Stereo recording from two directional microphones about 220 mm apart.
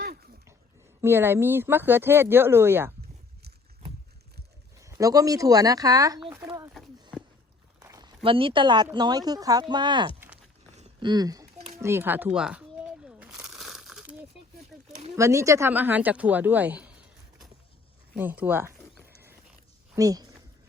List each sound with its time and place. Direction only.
1.0 s speech: 10° right (ahead or behind)
4.8 s speech: 15° right (ahead or behind)
6.3 s a sound: 10° right (ahead or behind)
7.8 s a woman's voice: 15° right (ahead or behind)
10.2 s a sound: 5° right (ahead or behind)
10.8 s a sound: 25° right (ahead or behind)
11.8 s speech: 10° right (ahead or behind)
13.1 s crumpling: 5° right (ahead or behind)
15.1 s speech: 15° right (ahead or behind)
20.0 s speech: 15° right (ahead or behind)